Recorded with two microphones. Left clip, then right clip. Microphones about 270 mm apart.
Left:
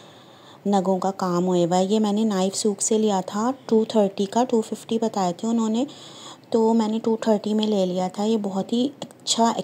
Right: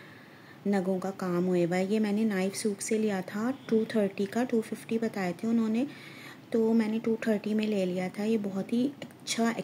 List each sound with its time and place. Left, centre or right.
0.7 s speech: centre
1.1 s speech: centre
1.6 s speech: centre
2.0 s speech: centre
2.4 s speech: centre
7.4 s speech: centre
7.7 s speech: centre